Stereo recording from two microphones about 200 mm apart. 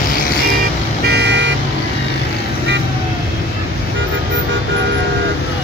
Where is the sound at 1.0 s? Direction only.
55° right (ahead or behind).